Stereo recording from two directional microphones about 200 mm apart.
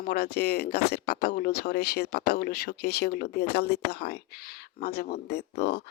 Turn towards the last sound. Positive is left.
turn(degrees=50)  # may be behind; listen again after turning